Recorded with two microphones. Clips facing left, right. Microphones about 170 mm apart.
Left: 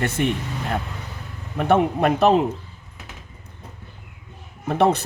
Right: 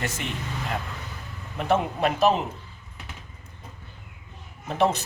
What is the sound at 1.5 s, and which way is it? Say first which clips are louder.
Speech: left 6 dB; 60° left (ahead or behind).